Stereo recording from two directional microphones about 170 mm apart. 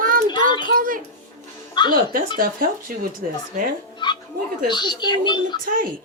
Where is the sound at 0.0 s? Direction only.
55° right (ahead or behind).